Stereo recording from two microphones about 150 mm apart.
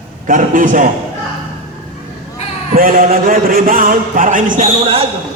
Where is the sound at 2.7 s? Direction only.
70° right (ahead or behind).